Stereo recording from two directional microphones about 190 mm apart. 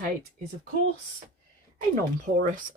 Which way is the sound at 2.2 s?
40° right (ahead or behind).